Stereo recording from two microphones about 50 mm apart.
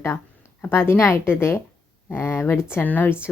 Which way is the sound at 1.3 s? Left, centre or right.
Left.